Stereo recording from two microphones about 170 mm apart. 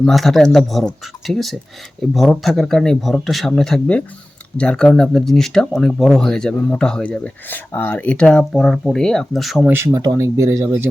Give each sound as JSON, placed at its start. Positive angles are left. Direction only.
{"t": 0.0, "sound": "speech", "side_deg": 0}
{"t": 9.7, "sound": "speech", "side_deg": -15}